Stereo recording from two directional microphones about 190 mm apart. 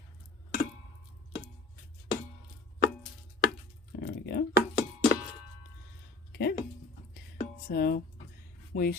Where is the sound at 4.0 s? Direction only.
60° left (ahead or behind).